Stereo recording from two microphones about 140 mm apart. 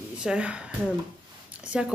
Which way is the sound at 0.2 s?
5° right (ahead or behind).